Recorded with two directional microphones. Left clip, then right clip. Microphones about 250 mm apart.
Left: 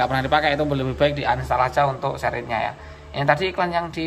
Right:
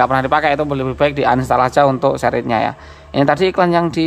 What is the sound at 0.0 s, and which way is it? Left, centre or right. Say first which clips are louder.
A man's voice: right 6 dB; centre.